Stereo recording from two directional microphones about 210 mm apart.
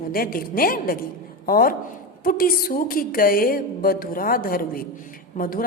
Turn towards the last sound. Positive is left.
turn(degrees=40)  # may be behind; listen again after turning